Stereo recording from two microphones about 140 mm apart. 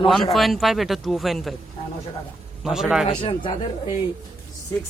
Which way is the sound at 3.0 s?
40° left (ahead or behind).